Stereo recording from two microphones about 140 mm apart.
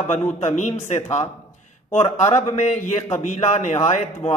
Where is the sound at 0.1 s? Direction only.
55° left (ahead or behind).